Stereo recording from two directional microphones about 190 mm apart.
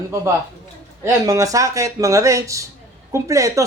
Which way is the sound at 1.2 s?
15° right (ahead or behind).